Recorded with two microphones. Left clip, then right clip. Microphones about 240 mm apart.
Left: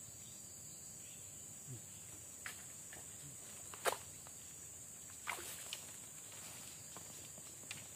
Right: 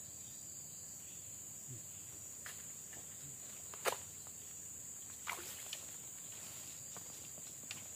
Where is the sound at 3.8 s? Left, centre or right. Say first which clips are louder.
Even; centre.